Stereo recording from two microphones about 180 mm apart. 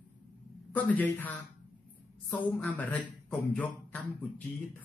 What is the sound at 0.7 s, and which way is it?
Speech, 10° left (ahead or behind).